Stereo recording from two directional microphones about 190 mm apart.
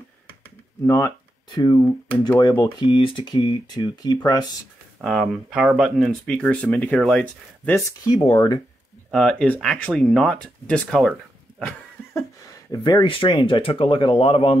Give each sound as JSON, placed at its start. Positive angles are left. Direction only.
{"t": 0.8, "sound": "speech", "side_deg": 15}
{"t": 5.0, "sound": "speech", "side_deg": 0}
{"t": 7.7, "sound": "speech", "side_deg": 25}
{"t": 9.1, "sound": "speech", "side_deg": 5}
{"t": 11.6, "sound": "a sound", "side_deg": 15}
{"t": 12.7, "sound": "speech", "side_deg": 25}